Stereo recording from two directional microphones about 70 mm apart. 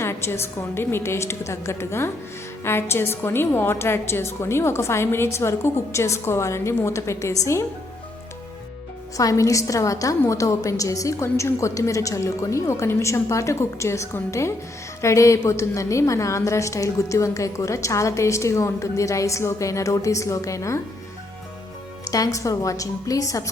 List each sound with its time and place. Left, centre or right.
0.0 s a woman's voice: left
9.1 s a woman's voice: left
22.1 s a woman's voice: left